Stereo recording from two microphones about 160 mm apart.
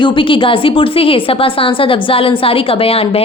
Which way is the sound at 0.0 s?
30° left (ahead or behind).